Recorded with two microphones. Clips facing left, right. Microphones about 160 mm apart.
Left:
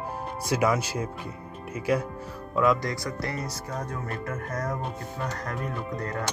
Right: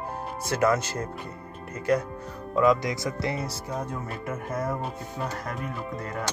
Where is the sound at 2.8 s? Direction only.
20° right (ahead or behind).